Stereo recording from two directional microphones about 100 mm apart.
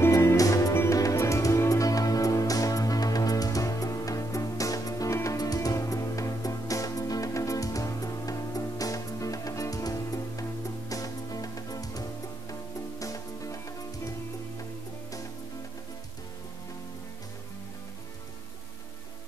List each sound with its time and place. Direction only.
0.0 s music: 25° left (ahead or behind)